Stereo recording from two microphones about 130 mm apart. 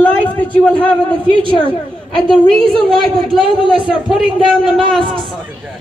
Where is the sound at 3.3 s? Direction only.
40° right (ahead or behind).